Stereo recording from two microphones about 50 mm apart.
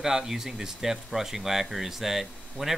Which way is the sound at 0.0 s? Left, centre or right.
Centre.